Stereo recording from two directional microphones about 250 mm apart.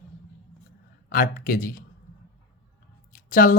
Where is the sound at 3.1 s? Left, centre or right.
Left.